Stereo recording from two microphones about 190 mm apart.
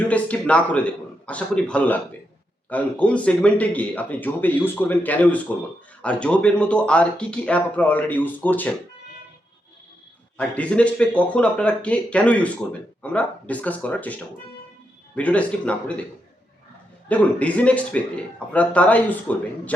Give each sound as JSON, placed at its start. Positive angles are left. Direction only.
{"t": 0.1, "sound": "speech", "side_deg": 5}
{"t": 10.3, "sound": "speech", "side_deg": 5}
{"t": 15.1, "sound": "speech", "side_deg": 5}
{"t": 17.1, "sound": "speech", "side_deg": 5}